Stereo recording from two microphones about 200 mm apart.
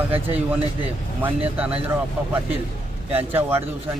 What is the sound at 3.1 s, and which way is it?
Speech, 10° right (ahead or behind).